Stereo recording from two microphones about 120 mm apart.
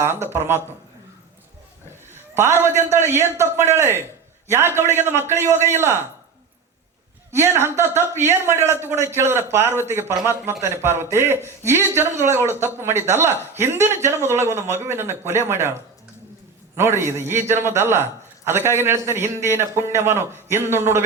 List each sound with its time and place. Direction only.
0.0 s a man's voice: 20° right (ahead or behind)
2.3 s a man's voice: 20° right (ahead or behind)
7.3 s a man's voice: 20° right (ahead or behind)